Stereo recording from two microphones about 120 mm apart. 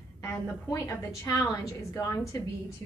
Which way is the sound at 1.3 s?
30° left (ahead or behind).